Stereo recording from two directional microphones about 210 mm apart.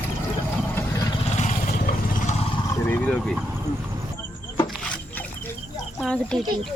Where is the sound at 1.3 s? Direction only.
35° left (ahead or behind).